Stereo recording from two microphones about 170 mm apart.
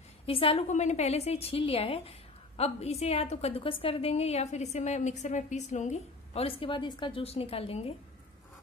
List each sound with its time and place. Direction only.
0.3 s a woman's voice: 35° left (ahead or behind)